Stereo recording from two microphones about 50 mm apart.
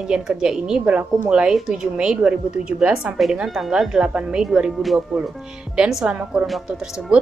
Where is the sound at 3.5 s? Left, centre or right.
Centre.